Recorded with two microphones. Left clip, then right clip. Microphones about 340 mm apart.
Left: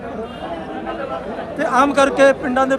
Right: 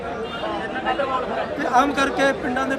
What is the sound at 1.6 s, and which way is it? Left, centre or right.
A man's voice, left.